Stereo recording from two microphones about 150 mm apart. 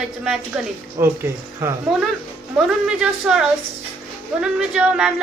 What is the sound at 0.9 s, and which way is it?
Speech, 15° right (ahead or behind).